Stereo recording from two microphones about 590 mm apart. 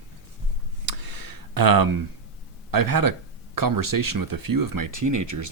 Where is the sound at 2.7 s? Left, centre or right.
Right.